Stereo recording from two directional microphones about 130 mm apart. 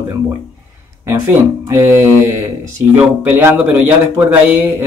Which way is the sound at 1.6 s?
20° right (ahead or behind).